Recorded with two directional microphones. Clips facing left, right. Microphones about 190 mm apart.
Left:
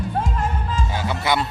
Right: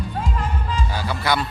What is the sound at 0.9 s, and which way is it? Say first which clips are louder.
Speech: left 1 dB; 20° left (ahead or behind).